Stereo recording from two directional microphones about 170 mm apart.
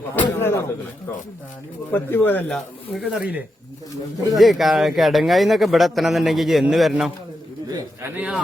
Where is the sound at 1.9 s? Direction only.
10° left (ahead or behind).